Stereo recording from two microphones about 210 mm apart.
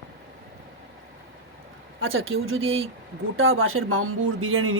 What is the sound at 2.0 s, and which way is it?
Speech, 70° right (ahead or behind).